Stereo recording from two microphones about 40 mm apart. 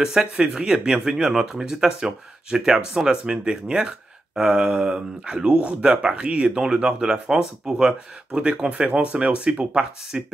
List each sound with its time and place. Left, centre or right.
0.0 s speech: centre